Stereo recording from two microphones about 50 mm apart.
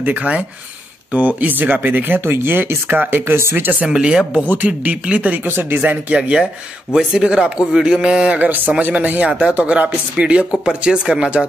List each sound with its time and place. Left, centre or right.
0.0 s speech: right
3.3 s speech: right
3.9 s a man's voice: centre
4.5 s a man's voice: right
8.4 s speech: right